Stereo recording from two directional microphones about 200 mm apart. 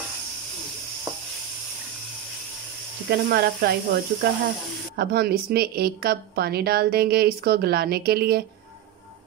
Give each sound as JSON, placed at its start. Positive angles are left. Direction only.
{"t": 3.1, "sound": "a woman's voice", "side_deg": -55}